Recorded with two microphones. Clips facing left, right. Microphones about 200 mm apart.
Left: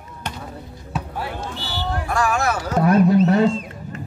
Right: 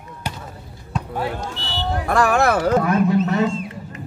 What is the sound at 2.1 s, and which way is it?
Speech, 60° right (ahead or behind).